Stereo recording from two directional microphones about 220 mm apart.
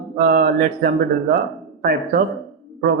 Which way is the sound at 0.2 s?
45° right (ahead or behind).